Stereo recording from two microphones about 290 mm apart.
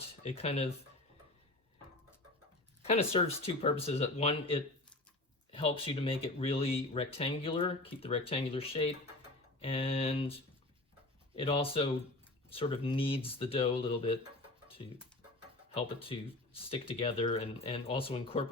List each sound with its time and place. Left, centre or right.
0.2 s speech: left
2.8 s speech: left
15.7 s speech: centre